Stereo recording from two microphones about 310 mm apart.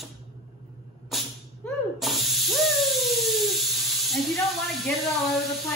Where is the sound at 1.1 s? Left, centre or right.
Centre.